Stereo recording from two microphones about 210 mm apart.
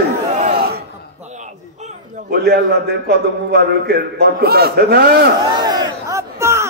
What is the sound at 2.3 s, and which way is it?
A man's voice, 50° right (ahead or behind).